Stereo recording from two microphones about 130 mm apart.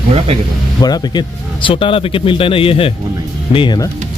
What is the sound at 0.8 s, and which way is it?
A man's voice, 30° left (ahead or behind).